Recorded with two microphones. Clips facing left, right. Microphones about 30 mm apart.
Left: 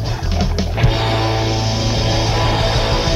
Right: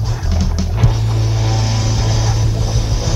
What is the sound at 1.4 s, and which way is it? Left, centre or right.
Music, left.